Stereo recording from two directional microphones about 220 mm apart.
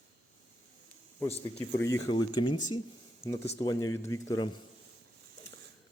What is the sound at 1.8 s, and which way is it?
Speech, 15° left (ahead or behind).